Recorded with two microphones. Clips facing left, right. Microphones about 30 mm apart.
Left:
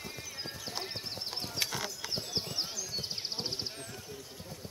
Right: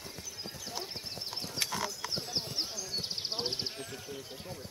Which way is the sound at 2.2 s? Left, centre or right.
Centre.